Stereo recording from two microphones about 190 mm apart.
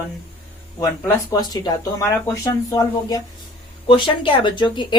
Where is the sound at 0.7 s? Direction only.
20° left (ahead or behind).